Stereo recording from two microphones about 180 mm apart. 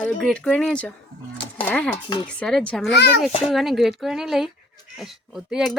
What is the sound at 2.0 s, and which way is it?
Speech, 25° left (ahead or behind).